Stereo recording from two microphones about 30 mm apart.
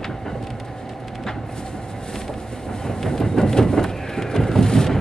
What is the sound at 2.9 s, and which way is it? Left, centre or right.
Vehicle, centre.